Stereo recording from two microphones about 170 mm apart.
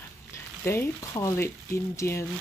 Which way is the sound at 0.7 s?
15° left (ahead or behind).